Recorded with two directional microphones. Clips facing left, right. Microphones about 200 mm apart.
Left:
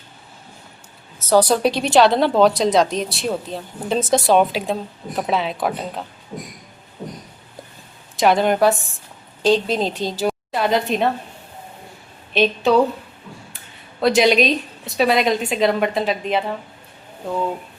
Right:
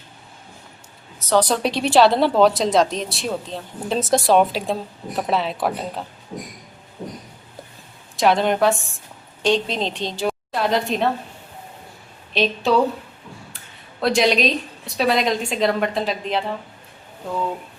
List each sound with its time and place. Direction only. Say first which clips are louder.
1.3 s speech: left 3 dB; 5° left (ahead or behind)
8.1 s a woman's voice: left 2 dB; centre (ahead or behind)
12.3 s speech: left 3 dB; centre (ahead or behind)
14.0 s speech: left 3 dB; centre (ahead or behind)